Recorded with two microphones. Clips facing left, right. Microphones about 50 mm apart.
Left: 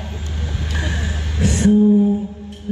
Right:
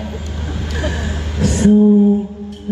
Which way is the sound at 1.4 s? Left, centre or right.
Left.